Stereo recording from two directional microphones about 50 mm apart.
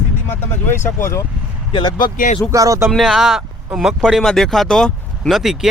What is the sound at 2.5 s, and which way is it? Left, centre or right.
Speech, right.